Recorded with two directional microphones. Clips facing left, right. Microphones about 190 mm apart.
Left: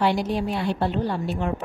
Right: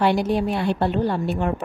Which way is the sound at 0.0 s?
60° right (ahead or behind).